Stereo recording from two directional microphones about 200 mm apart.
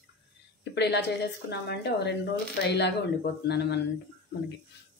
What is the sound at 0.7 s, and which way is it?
Speech, 55° left (ahead or behind).